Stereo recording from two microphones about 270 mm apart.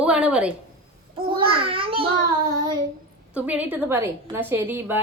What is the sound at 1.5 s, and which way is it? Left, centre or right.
A child's voice, centre.